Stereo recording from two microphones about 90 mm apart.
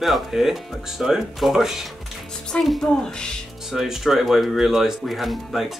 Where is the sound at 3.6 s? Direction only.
5° right (ahead or behind).